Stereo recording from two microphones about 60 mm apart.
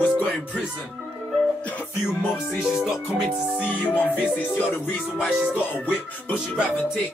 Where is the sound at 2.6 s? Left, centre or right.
Centre.